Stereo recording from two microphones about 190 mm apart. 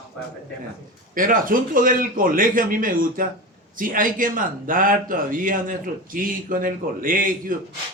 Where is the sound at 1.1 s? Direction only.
45° right (ahead or behind).